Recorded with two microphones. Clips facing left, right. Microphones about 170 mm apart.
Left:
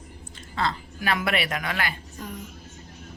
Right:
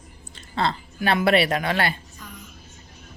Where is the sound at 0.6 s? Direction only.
30° right (ahead or behind).